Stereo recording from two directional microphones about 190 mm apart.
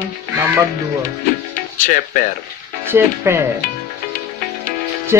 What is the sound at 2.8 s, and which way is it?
Speech, 15° right (ahead or behind).